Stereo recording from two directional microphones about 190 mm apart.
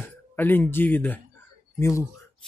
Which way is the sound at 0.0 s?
10° left (ahead or behind).